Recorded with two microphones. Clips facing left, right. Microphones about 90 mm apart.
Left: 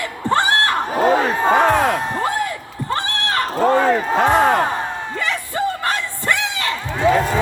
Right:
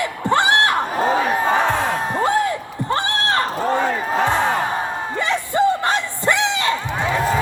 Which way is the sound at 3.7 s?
60° left (ahead or behind).